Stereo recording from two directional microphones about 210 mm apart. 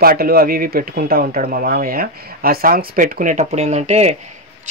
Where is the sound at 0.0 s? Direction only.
45° right (ahead or behind).